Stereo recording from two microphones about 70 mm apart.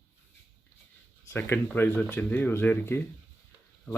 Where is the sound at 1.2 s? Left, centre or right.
Left.